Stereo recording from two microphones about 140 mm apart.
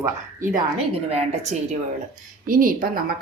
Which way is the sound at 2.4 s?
90° right.